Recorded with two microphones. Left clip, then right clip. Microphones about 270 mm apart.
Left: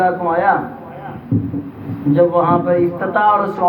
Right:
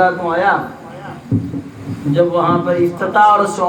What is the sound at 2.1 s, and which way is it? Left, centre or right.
A man's voice, right.